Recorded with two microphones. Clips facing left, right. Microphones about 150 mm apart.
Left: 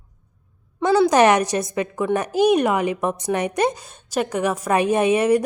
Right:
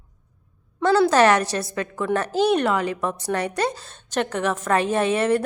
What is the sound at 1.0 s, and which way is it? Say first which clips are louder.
A woman's voice: left 2 dB; 15° left (ahead or behind).